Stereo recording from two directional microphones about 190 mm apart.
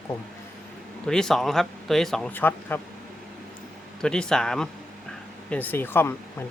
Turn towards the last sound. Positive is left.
turn(degrees=10)  # may be behind; listen again after turning